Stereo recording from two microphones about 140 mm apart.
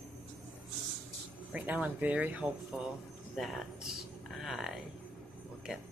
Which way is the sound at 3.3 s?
Centre (ahead or behind).